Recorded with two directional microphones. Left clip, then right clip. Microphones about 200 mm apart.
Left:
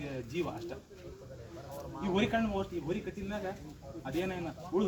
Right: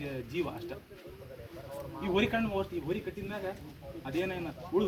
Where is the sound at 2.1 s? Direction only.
10° left (ahead or behind).